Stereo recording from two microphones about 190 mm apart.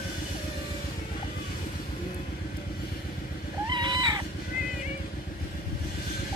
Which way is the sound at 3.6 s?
25° right (ahead or behind).